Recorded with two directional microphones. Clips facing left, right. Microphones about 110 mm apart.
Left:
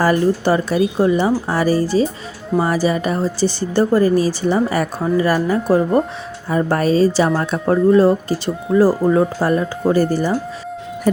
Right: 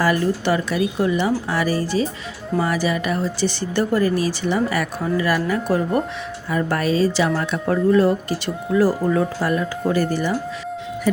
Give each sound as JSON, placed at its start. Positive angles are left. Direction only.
{"t": 0.0, "sound": "a woman's voice", "side_deg": 35}